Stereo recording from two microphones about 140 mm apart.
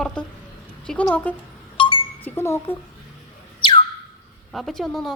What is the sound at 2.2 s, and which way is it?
Speech, 15° left (ahead or behind).